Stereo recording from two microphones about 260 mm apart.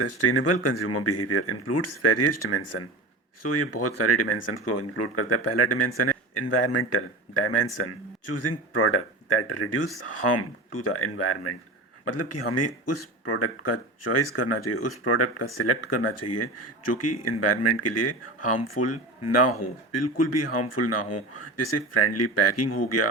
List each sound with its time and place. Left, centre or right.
0.0 s speech: left